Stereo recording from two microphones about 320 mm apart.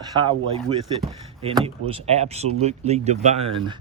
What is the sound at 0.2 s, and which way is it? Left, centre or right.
Speech, centre.